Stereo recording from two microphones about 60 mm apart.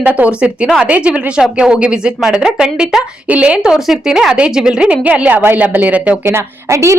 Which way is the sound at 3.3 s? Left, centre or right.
Centre.